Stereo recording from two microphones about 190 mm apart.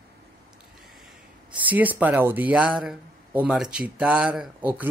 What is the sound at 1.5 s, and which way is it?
Speech, 10° right (ahead or behind).